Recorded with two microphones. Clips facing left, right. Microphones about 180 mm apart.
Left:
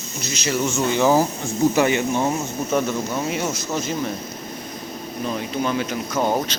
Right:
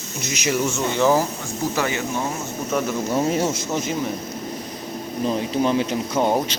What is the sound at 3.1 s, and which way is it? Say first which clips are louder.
Speech: right 4 dB; 35° right (ahead or behind).